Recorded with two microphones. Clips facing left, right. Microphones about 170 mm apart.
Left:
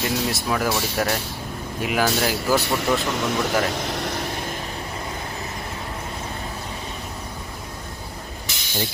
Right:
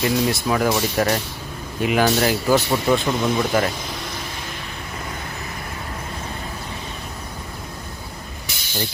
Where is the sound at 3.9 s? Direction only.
70° left (ahead or behind).